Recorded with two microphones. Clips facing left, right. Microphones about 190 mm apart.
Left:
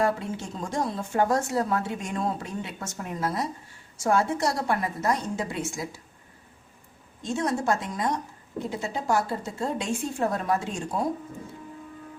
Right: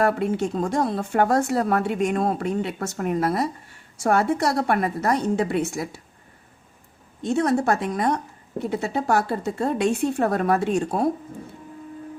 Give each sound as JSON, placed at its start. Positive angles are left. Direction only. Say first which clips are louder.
{"t": 0.0, "sound": "a woman's voice", "louder": "right 5 dB", "side_deg": -65}
{"t": 7.2, "sound": "a woman's voice", "louder": "right 6 dB", "side_deg": -65}